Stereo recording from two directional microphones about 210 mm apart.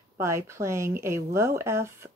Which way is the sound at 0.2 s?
15° right (ahead or behind).